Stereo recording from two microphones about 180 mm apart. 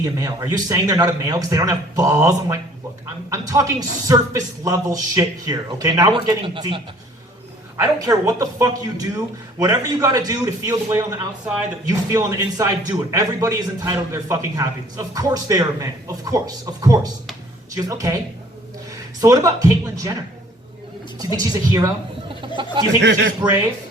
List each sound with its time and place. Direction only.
0.0 s speech: 15° right (ahead or behind)
7.8 s speech: 15° right (ahead or behind)
19.2 s speech: 20° right (ahead or behind)
21.2 s speech: 20° right (ahead or behind)
22.3 s a sound: 25° right (ahead or behind)
23.0 s a man's voice: 80° right